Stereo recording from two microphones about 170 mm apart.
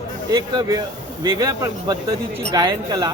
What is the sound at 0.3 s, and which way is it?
A man's voice, 20° right (ahead or behind).